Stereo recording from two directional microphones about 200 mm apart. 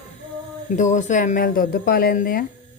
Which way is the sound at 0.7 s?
35° left (ahead or behind).